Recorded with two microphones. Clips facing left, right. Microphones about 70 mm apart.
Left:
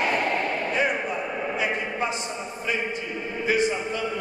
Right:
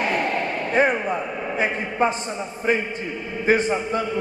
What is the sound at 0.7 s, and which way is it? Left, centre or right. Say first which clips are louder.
A man's voice: right 9 dB; right.